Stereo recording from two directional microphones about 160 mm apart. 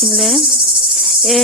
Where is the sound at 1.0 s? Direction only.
Centre (ahead or behind).